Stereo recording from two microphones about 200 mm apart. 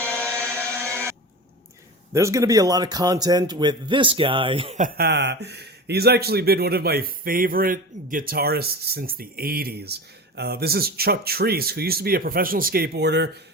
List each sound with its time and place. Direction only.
0.0 s music: 10° left (ahead or behind)
2.1 s a man's voice: 15° right (ahead or behind)
4.8 s speech: 50° right (ahead or behind)